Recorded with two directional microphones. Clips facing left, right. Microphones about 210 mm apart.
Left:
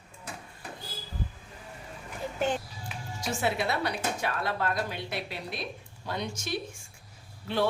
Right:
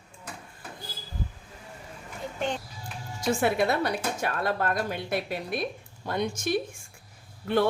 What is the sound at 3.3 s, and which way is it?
Speech, 55° right (ahead or behind).